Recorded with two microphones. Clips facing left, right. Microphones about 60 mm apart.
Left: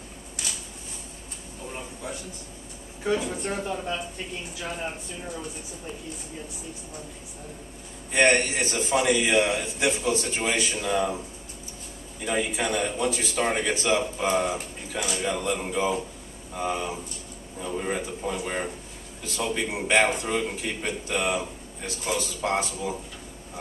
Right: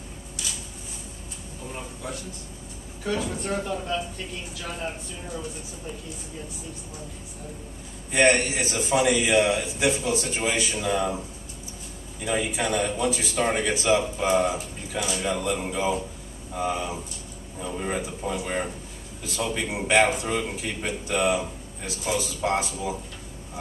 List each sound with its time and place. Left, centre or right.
3.0 s speech: centre
8.1 s a man's voice: centre
12.3 s a man's voice: centre
19.7 s a man's voice: centre